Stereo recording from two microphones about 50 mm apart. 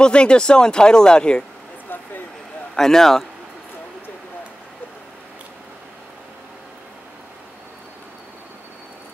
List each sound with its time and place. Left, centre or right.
0.0 s speech: centre
2.7 s speech: centre